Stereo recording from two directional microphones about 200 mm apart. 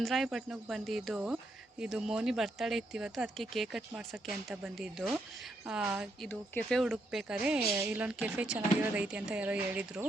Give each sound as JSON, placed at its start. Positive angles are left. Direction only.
{"t": 0.0, "sound": "a woman's voice", "side_deg": 0}
{"t": 6.2, "sound": "a woman's voice", "side_deg": 5}